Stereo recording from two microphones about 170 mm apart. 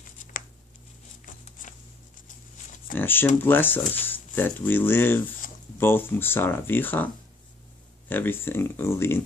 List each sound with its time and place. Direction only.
1.2 s a sound: 50° left (ahead or behind)
2.9 s speech: 10° left (ahead or behind)
8.1 s speech: 10° left (ahead or behind)